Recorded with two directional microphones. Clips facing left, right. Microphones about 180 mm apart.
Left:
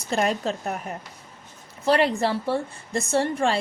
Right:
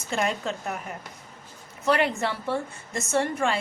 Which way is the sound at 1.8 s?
35° left (ahead or behind).